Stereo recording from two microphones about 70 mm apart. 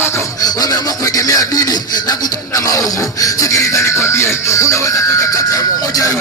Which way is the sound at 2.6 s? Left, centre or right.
Left.